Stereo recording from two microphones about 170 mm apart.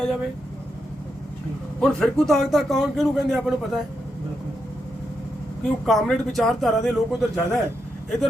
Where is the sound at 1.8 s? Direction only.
5° left (ahead or behind).